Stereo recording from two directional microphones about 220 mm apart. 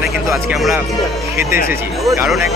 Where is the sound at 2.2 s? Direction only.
Centre (ahead or behind).